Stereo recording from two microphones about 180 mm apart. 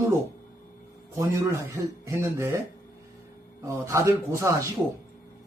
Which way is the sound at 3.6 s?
15° right (ahead or behind).